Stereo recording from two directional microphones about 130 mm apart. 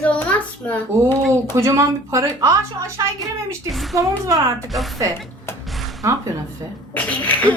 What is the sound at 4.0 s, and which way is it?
Speech, 25° right (ahead or behind).